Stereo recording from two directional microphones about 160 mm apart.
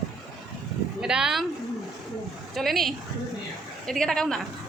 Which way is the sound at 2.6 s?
Centre (ahead or behind).